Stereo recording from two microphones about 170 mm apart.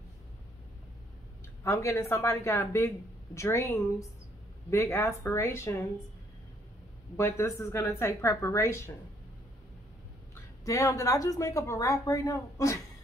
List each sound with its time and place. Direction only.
1.6 s a woman's voice: 15° left (ahead or behind)
7.2 s a woman's voice: 15° left (ahead or behind)
10.3 s a woman's voice: 20° left (ahead or behind)